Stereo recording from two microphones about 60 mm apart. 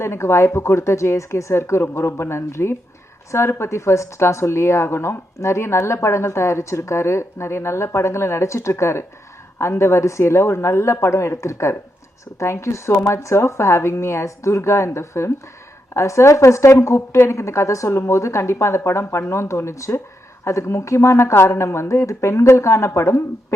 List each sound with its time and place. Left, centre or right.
0.0 s speech: left